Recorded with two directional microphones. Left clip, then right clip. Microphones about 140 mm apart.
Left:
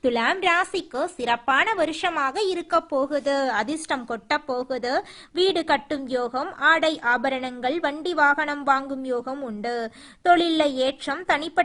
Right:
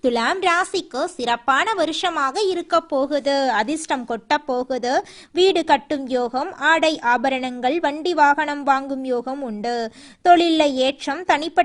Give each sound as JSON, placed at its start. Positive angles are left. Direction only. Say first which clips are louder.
{"t": 0.0, "sound": "speech", "louder": "right 2 dB", "side_deg": -35}